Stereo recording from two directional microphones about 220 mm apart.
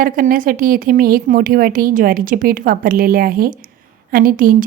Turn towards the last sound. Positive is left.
turn(degrees=-40)  # may be behind; listen again after turning